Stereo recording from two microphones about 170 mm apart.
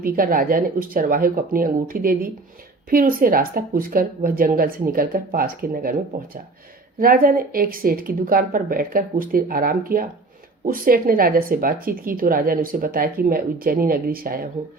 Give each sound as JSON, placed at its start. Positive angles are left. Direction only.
{"t": 0.0, "sound": "speech", "side_deg": -55}